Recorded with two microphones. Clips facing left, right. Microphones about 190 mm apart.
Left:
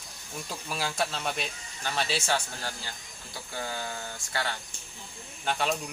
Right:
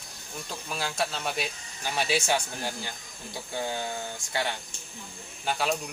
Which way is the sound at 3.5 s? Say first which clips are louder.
Right 4 dB; 20° right (ahead or behind).